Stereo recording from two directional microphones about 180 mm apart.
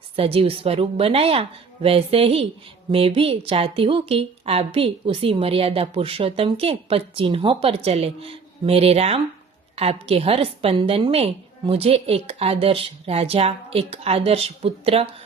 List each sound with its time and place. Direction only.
0.2 s a woman's voice: 30° right (ahead or behind)